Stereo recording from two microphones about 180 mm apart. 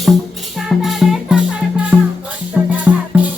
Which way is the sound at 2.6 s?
5° right (ahead or behind).